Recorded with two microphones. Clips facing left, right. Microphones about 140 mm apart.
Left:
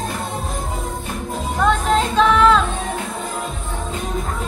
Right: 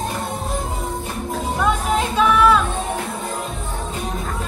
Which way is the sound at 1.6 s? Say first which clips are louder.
Left 4 dB; 10° right (ahead or behind).